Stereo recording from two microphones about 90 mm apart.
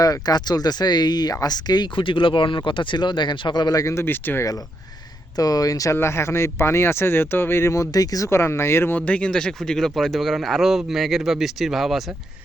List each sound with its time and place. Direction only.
0.0 s speech: 45° left (ahead or behind); by 4.4 s 25° left (ahead or behind)
5.4 s speech: 45° left (ahead or behind)
8.3 s speech: 30° left (ahead or behind); by 12.0 s centre (ahead or behind)